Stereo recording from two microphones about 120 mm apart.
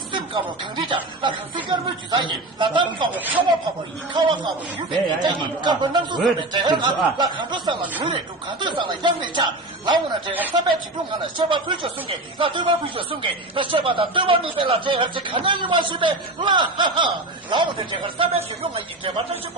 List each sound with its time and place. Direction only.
0.1 s speech: 40° right (ahead or behind)
3.1 s a man's voice: 15° right (ahead or behind)
4.1 s speech: 40° right (ahead or behind)
11.3 s speech: 45° right (ahead or behind)